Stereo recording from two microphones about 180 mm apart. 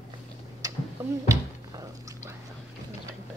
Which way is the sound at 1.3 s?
15° right (ahead or behind).